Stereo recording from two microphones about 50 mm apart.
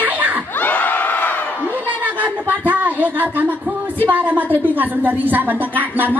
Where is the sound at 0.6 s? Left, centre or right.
Left.